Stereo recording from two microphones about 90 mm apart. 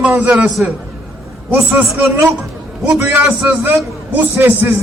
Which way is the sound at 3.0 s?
20° right (ahead or behind).